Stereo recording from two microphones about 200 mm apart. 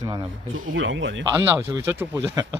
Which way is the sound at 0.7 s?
70° right (ahead or behind).